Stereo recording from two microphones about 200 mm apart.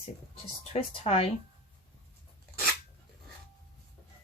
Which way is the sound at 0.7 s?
30° left (ahead or behind).